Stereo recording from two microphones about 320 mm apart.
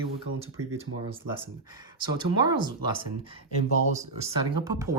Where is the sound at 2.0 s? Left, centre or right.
Centre.